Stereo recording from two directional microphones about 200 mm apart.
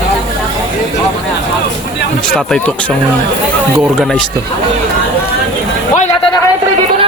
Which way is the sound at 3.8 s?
5° right (ahead or behind).